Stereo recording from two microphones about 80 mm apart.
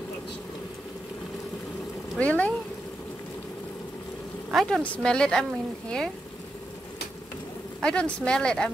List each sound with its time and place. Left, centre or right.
2.1 s speech: centre
4.6 s speech: centre
4.8 s speech: centre
7.8 s speech: centre